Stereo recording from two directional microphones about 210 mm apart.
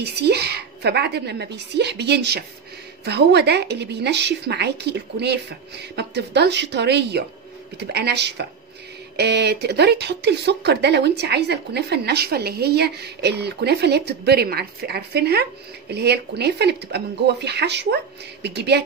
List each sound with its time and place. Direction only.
0.0 s speech: 50° right (ahead or behind)